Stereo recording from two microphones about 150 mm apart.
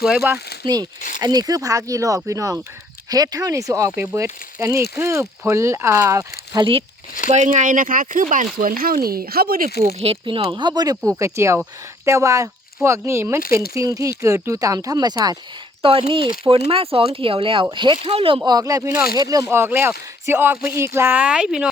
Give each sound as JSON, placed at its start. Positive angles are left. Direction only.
{"t": 0.0, "sound": "speech", "side_deg": -5}
{"t": 0.6, "sound": "speech", "side_deg": -25}
{"t": 6.5, "sound": "speech", "side_deg": -30}
{"t": 7.3, "sound": "speech", "side_deg": -50}
{"t": 8.5, "sound": "speech", "side_deg": -75}
{"t": 9.0, "sound": "speech", "side_deg": -85}
{"t": 10.0, "sound": "speech", "side_deg": -40}
{"t": 11.2, "sound": "speech", "side_deg": -20}